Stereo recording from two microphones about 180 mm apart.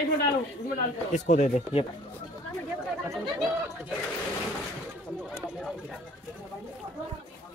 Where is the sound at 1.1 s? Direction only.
45° left (ahead or behind).